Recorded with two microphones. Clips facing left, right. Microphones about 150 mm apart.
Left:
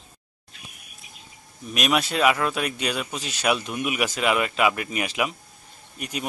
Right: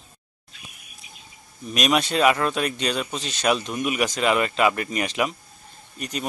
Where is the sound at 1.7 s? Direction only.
5° left (ahead or behind).